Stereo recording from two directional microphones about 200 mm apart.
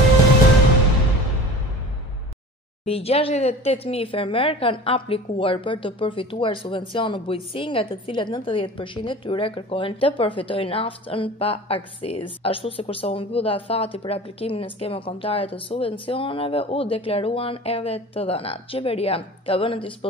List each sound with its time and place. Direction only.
2.8 s speech: 30° left (ahead or behind)